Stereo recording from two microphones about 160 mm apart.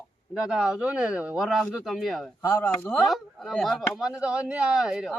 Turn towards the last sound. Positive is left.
turn(degrees=-5)  # may be behind; listen again after turning